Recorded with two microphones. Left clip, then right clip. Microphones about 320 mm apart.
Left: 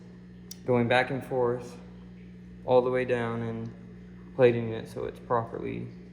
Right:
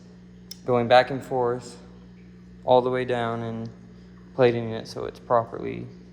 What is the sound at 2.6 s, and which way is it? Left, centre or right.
Speech, right.